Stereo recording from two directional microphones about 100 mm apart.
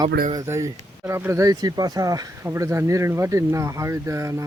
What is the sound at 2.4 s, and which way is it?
Speech, 25° right (ahead or behind).